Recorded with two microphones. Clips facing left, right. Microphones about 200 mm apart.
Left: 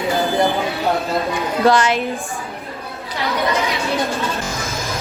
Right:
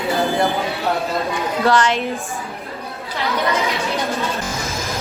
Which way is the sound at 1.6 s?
10° left (ahead or behind).